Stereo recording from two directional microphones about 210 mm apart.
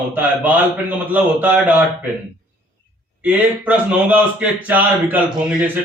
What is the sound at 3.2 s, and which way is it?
A man's voice, 5° right (ahead or behind).